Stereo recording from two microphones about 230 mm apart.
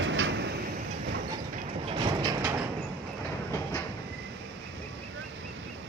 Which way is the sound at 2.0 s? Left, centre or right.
Centre.